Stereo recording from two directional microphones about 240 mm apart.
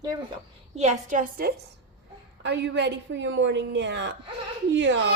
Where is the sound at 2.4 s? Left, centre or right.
Right.